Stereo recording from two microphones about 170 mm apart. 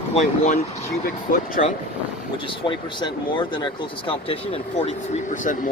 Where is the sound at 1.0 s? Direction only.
55° left (ahead or behind).